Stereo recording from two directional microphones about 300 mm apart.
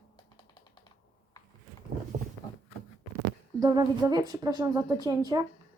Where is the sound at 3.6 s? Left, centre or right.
Centre.